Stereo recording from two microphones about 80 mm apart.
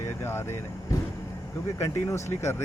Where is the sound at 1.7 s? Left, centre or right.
Left.